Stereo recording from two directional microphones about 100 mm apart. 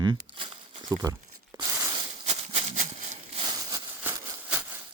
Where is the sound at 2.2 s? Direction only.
75° right (ahead or behind).